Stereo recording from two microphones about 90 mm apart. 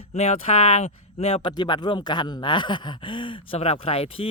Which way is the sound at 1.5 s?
55° left (ahead or behind).